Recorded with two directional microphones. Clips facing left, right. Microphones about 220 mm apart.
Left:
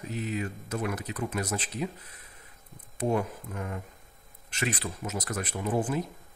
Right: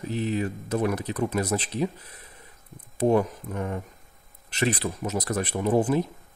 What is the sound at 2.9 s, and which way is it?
Speech, 40° right (ahead or behind).